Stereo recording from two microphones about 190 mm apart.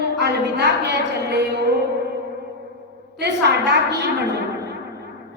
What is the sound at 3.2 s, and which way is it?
Speech, 60° right (ahead or behind).